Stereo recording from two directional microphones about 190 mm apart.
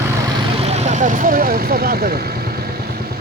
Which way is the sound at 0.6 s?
35° right (ahead or behind).